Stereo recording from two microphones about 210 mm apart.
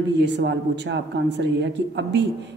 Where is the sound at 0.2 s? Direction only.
55° right (ahead or behind).